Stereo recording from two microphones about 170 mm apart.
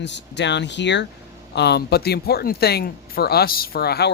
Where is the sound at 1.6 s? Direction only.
75° left (ahead or behind).